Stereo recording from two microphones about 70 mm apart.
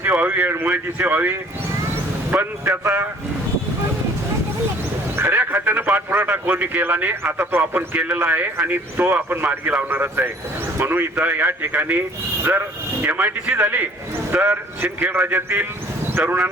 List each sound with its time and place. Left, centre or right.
0.0 s a man's voice: right
5.1 s a man's voice: right